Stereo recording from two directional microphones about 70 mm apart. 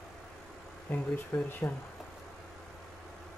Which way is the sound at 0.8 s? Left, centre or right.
Left.